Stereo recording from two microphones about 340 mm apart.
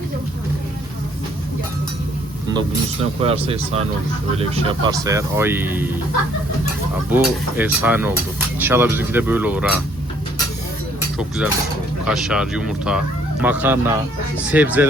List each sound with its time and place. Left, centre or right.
2.5 s speech: centre
7.1 s speech: centre
12.0 s speech: centre